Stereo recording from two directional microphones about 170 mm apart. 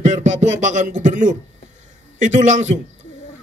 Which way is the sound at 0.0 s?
45° right (ahead or behind).